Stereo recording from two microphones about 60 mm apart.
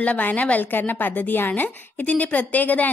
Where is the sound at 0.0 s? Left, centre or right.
Left.